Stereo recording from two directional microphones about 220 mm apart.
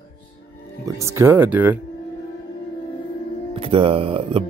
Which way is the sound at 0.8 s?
15° right (ahead or behind).